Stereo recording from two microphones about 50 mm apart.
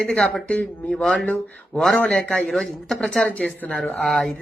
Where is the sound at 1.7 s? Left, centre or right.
Centre.